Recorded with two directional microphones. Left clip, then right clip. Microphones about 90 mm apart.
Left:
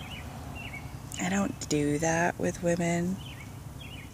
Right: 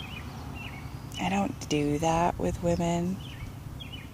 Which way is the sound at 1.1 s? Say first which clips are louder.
Right 2 dB; 25° left (ahead or behind).